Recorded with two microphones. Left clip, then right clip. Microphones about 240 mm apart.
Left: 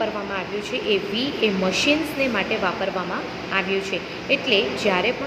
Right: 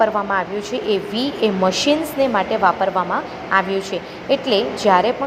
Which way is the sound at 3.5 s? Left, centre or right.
Right.